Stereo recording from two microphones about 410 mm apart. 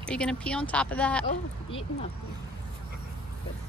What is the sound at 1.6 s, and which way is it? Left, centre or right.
Speech, centre.